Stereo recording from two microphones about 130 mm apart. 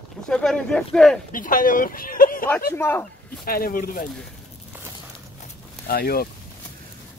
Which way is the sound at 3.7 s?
90° left.